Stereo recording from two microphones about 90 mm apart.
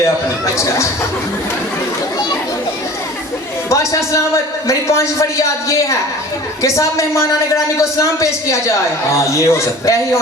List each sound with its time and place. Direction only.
3.7 s a man's voice: 35° left (ahead or behind)